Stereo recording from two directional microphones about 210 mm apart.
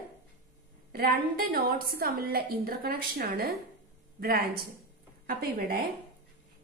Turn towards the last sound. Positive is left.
turn(degrees=-45)  # may be behind; listen again after turning